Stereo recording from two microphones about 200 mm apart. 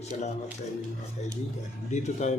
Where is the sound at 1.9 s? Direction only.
35° left (ahead or behind).